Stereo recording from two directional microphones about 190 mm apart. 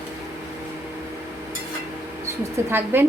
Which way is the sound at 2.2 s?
10° right (ahead or behind).